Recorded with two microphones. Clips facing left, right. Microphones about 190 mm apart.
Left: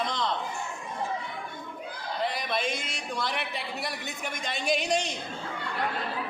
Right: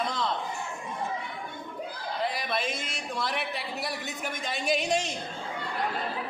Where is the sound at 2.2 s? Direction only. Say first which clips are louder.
Left 1 dB; centre (ahead or behind).